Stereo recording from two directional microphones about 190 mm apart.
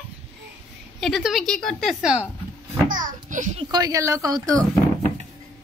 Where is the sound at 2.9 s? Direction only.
45° right (ahead or behind).